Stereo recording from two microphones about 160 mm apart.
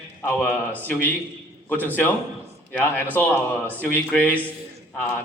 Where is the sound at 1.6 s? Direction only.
10° left (ahead or behind).